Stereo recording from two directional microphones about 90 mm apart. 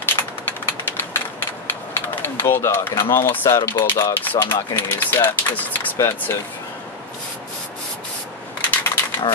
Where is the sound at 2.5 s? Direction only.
30° left (ahead or behind).